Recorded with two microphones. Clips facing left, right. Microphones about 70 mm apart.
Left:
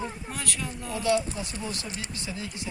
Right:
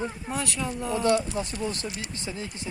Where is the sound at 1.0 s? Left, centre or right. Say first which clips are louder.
Right 1 dB; right.